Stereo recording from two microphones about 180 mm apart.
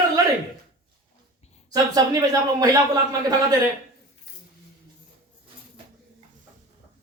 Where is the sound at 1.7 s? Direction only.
20° right (ahead or behind).